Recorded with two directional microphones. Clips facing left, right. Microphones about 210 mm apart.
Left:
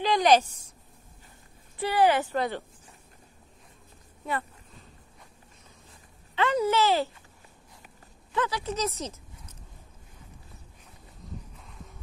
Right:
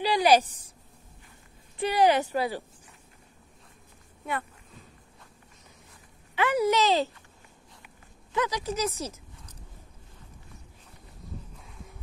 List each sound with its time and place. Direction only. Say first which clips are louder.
0.0 s a sound: even; 10° right (ahead or behind)
1.8 s speech: right 1 dB; 15° right (ahead or behind)
6.3 s speech: right 1 dB; 10° right (ahead or behind)
8.4 s speech: right 1 dB; 15° right (ahead or behind)